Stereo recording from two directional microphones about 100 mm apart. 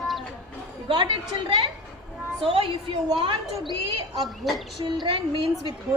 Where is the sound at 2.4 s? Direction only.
65° right (ahead or behind).